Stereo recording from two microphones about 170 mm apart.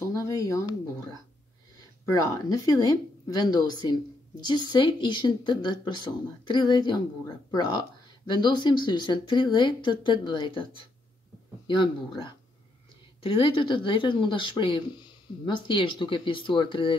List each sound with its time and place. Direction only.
0.0 s a sound: 20° left (ahead or behind)
2.3 s speech: 20° left (ahead or behind)
8.3 s speech: 25° left (ahead or behind)
11.6 s speech: 25° left (ahead or behind)